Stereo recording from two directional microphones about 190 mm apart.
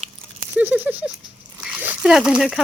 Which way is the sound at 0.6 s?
10° right (ahead or behind).